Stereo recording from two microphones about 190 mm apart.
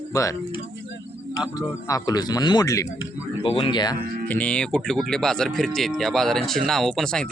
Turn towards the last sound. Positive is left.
turn(degrees=5)  # may be behind; listen again after turning